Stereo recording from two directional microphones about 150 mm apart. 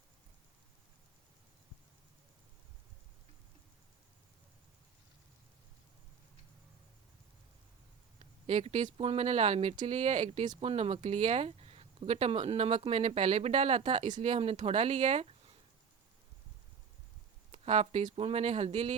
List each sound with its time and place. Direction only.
8.2 s speech: 45° right (ahead or behind)
17.5 s speech: 45° right (ahead or behind)